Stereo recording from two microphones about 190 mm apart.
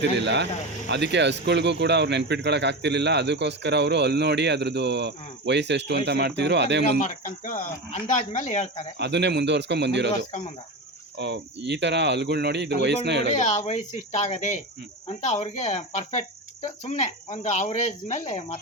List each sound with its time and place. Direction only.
0.0 s speech: 65° right (ahead or behind)
7.0 s speech: 40° left (ahead or behind)
9.0 s speech: 65° right (ahead or behind)
11.2 s speech: 65° right (ahead or behind)
13.2 s speech: 35° left (ahead or behind)